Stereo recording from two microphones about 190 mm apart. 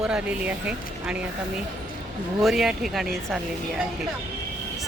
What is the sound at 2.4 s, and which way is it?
Speech, centre (ahead or behind).